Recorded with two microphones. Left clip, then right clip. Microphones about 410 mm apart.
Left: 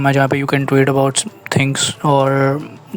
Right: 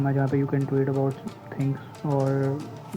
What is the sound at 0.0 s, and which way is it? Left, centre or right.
Speech, left.